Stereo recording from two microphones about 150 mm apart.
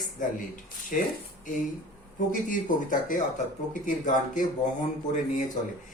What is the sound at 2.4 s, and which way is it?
Speech, 60° left (ahead or behind).